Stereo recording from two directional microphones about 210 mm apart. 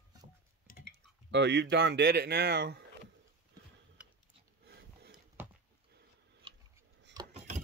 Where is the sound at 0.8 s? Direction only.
55° right (ahead or behind).